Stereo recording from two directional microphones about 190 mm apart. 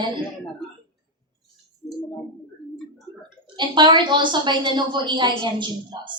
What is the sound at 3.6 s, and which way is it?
A woman's voice, 25° right (ahead or behind).